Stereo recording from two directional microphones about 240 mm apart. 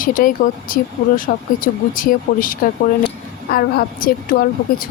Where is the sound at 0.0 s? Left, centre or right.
Left.